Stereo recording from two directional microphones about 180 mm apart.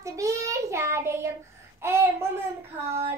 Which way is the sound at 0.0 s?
15° right (ahead or behind).